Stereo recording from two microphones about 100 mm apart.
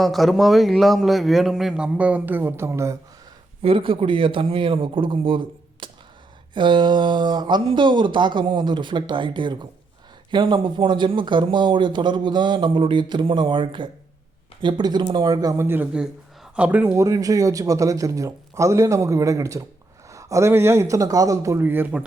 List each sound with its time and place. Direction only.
0.0 s a man's voice: centre (ahead or behind); by 3.0 s 30° right (ahead or behind)
3.6 s speech: 60° right (ahead or behind)
5.8 s a sound: 55° right (ahead or behind)
6.5 s speech: 55° right (ahead or behind)
15.5 s speech: 20° right (ahead or behind)
15.9 s speech: 10° right (ahead or behind)
16.9 s speech: 35° right (ahead or behind)
21.6 s speech: 20° right (ahead or behind)